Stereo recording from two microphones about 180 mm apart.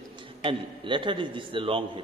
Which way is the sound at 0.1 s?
30° right (ahead or behind).